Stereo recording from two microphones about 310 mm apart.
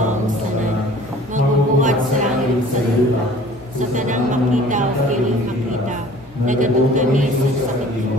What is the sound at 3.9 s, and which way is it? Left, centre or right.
Speech, right.